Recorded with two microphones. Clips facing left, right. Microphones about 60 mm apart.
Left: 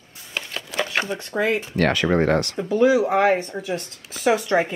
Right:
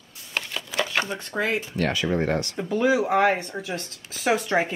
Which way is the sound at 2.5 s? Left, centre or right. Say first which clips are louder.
Left 3 dB; centre.